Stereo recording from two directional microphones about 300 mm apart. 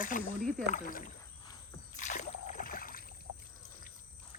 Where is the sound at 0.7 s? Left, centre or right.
Left.